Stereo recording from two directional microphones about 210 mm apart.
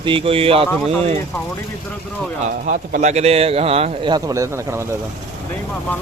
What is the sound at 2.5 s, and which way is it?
A man's voice, 40° right (ahead or behind).